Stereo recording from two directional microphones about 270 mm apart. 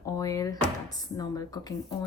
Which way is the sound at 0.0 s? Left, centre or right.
Centre.